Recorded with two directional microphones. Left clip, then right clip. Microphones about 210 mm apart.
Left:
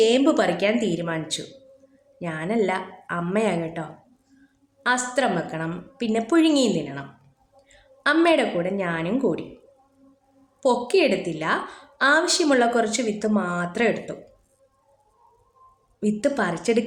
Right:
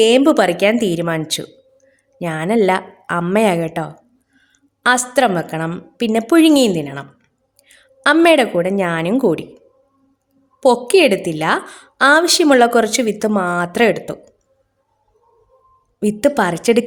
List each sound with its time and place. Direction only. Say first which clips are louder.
0.0 s a woman's voice: right 7 dB; 45° right (ahead or behind)
10.6 s a woman's voice: right 8 dB; 50° right (ahead or behind)
16.0 s a woman's voice: right 8 dB; 50° right (ahead or behind)